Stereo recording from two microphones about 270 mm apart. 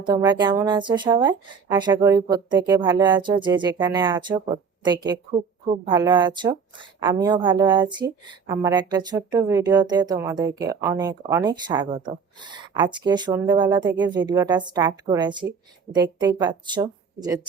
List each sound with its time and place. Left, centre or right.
0.0 s speech: centre